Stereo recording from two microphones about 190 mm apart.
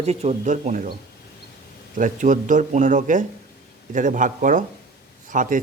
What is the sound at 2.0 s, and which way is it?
Speech, 45° right (ahead or behind).